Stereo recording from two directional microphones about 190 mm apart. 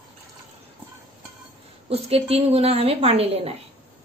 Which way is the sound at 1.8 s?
30° right (ahead or behind).